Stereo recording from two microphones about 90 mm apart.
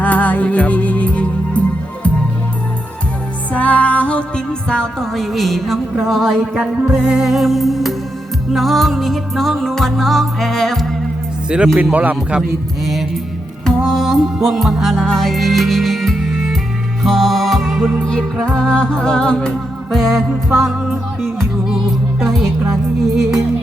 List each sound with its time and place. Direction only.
0.0 s music: 15° left (ahead or behind)
3.5 s music: 15° left (ahead or behind)
11.4 s speech: 10° right (ahead or behind)
12.4 s music: centre (ahead or behind)
22.2 s speech: centre (ahead or behind)
22.7 s music: 5° right (ahead or behind)